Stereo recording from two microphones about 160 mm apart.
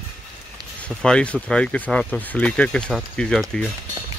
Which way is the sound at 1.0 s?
5° left (ahead or behind).